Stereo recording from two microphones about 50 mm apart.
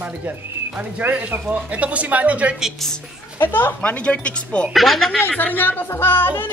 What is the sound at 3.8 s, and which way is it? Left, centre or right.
Speech, left.